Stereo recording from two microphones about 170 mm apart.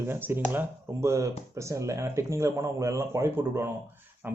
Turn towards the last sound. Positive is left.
turn(degrees=-15)  # may be behind; listen again after turning